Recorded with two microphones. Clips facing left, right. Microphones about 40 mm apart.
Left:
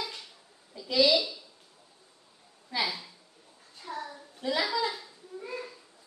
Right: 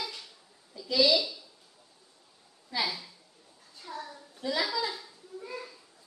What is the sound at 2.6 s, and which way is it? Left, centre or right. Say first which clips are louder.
Speech: left 1 dB; centre.